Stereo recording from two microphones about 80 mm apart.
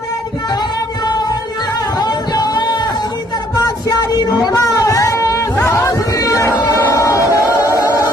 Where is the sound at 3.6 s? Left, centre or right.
Left.